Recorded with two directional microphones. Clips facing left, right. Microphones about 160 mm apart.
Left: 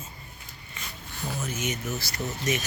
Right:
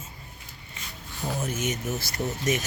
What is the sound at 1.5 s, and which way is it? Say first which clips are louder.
Speech: right 2 dB; 45° right (ahead or behind).